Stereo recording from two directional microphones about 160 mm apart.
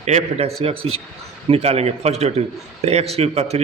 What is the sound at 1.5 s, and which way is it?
A man's voice, 40° right (ahead or behind).